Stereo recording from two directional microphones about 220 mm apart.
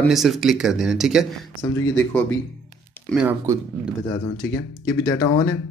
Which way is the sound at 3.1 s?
5° right (ahead or behind).